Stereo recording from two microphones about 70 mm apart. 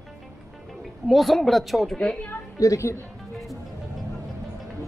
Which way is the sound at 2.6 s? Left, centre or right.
Left.